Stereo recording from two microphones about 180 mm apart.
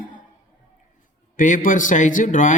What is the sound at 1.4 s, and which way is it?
A man's voice, 45° left (ahead or behind).